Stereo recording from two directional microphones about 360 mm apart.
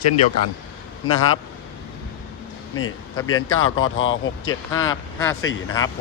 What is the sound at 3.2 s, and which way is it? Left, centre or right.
Speech, left.